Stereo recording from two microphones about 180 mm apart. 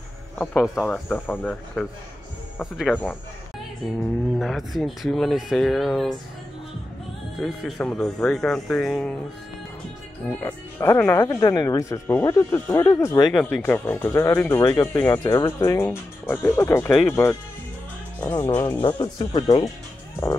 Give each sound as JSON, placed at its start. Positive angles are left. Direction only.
{"t": 0.4, "sound": "speech", "side_deg": 5}
{"t": 3.0, "sound": "music", "side_deg": 10}
{"t": 4.4, "sound": "speech", "side_deg": 0}
{"t": 7.3, "sound": "speech", "side_deg": 0}
{"t": 10.4, "sound": "speech", "side_deg": 15}
{"t": 13.3, "sound": "speech", "side_deg": 0}
{"t": 18.5, "sound": "speech", "side_deg": 10}
{"t": 18.8, "sound": "speech", "side_deg": 25}